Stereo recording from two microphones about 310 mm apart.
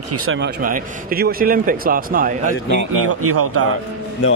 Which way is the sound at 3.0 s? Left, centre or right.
Right.